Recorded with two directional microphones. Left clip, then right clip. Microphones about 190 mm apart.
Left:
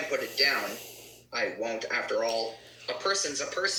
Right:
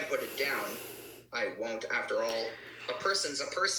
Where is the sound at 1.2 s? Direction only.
Centre (ahead or behind).